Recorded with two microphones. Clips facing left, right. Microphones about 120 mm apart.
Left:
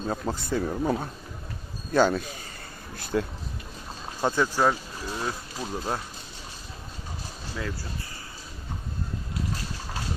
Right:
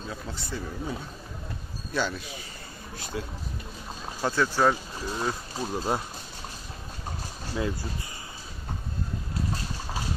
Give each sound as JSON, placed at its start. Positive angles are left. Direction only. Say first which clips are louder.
{"t": 0.1, "sound": "speech", "louder": "left 9 dB", "side_deg": 50}
{"t": 4.2, "sound": "speech", "louder": "left 1 dB", "side_deg": 15}
{"t": 4.7, "sound": "speech", "louder": "right 1 dB", "side_deg": -5}